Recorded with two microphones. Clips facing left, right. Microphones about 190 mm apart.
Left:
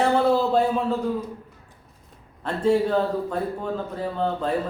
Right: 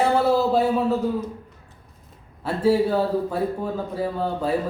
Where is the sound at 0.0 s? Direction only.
5° right (ahead or behind).